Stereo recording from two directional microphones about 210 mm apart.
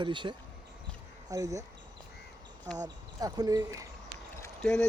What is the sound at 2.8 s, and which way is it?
Speech, 20° right (ahead or behind).